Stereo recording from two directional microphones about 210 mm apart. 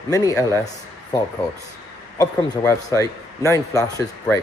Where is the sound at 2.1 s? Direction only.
15° left (ahead or behind).